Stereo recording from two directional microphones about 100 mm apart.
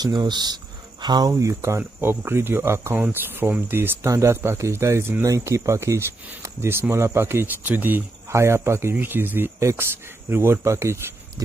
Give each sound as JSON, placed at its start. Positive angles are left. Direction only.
{"t": 0.0, "sound": "speech", "side_deg": -45}
{"t": 1.3, "sound": "speech", "side_deg": -30}
{"t": 11.4, "sound": "pig", "side_deg": -30}